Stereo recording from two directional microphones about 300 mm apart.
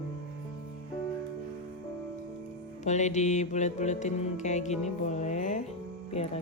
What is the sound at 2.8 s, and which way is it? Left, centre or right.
Music, left.